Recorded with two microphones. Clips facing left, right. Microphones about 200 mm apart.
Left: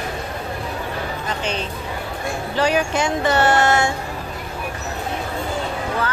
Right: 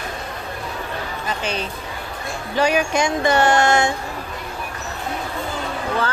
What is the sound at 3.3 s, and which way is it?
Child singing, 15° right (ahead or behind).